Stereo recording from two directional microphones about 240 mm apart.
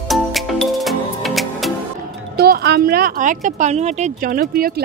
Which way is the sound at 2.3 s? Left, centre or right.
Right.